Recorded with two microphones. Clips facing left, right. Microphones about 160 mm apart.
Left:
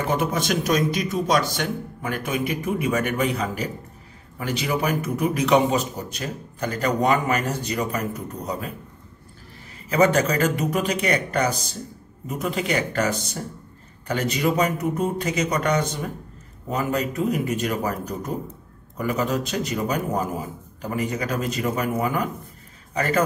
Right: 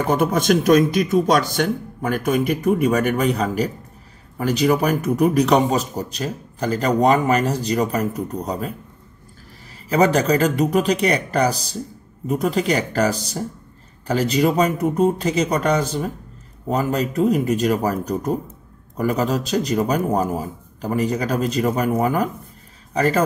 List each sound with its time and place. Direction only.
0.1 s a man's voice: 45° right (ahead or behind)
9.8 s a man's voice: 35° right (ahead or behind)